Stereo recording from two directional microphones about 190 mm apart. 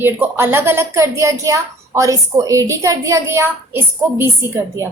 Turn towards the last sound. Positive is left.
turn(degrees=-15)  # may be behind; listen again after turning